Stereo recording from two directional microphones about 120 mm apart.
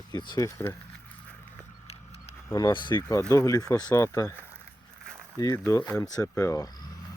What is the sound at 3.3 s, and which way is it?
Speech, 30° left (ahead or behind).